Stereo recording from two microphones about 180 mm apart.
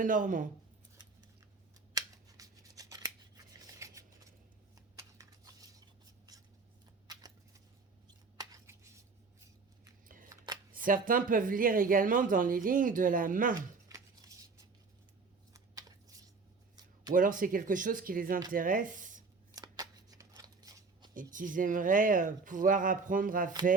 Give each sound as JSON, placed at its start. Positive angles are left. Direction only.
{"t": 0.0, "sound": "speech", "side_deg": -45}
{"t": 2.0, "sound": "scissors", "side_deg": -20}
{"t": 4.9, "sound": "a sound", "side_deg": -20}
{"t": 7.1, "sound": "a sound", "side_deg": -20}
{"t": 10.2, "sound": "shuffling cards", "side_deg": -20}
{"t": 10.7, "sound": "speech", "side_deg": -50}
{"t": 13.8, "sound": "scissors", "side_deg": -20}
{"t": 15.5, "sound": "a sound", "side_deg": -20}
{"t": 17.2, "sound": "speech", "side_deg": -50}
{"t": 19.5, "sound": "shuffling cards", "side_deg": -20}
{"t": 21.3, "sound": "speech", "side_deg": -45}